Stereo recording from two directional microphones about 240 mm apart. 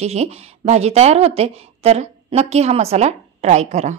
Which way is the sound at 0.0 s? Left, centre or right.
Right.